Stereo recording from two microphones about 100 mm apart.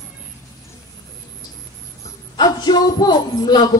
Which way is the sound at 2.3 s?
45° left (ahead or behind).